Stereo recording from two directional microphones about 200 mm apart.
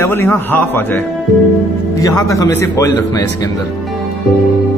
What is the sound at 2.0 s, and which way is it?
Speech, 15° left (ahead or behind).